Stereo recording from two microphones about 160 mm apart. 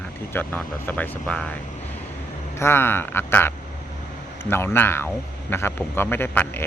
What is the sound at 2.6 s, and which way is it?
Speech, 15° left (ahead or behind).